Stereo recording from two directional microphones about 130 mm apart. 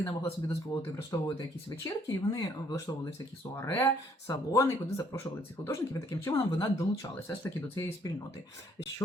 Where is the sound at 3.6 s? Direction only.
25° left (ahead or behind).